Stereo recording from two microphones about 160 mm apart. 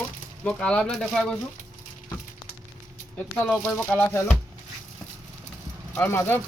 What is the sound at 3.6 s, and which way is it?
Speech, 10° left (ahead or behind).